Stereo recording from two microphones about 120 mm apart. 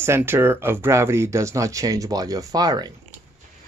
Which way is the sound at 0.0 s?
20° right (ahead or behind).